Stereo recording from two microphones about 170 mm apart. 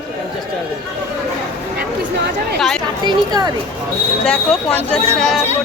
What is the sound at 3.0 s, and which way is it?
Speech, 25° right (ahead or behind).